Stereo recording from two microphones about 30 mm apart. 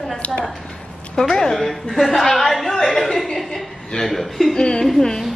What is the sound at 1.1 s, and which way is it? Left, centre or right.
A woman's voice, centre.